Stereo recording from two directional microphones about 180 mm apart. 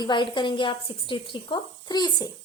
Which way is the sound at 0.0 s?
25° left (ahead or behind).